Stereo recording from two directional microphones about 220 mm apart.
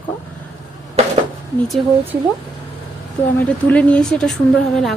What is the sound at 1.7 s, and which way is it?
Speech, centre (ahead or behind).